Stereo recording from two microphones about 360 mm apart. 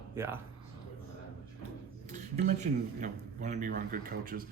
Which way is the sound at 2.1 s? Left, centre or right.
Centre.